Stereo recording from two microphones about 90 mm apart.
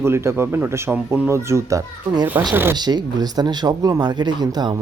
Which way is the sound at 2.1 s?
60° right (ahead or behind).